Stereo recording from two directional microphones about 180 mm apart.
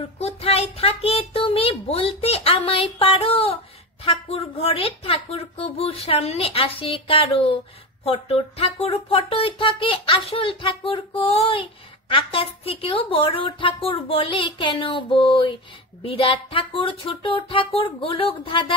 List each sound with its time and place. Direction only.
0.2 s a woman's voice: 35° left (ahead or behind)